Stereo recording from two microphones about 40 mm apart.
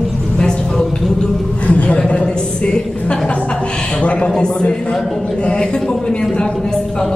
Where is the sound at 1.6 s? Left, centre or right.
Left.